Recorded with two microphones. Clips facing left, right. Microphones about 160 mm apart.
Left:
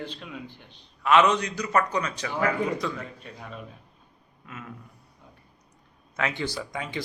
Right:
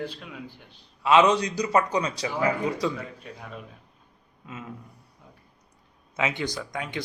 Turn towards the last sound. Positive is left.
turn(degrees=0)  # may be behind; listen again after turning